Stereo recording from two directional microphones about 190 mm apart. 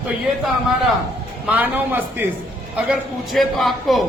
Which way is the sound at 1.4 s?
10° right (ahead or behind).